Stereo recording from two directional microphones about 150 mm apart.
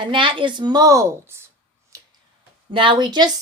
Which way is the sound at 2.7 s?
35° right (ahead or behind).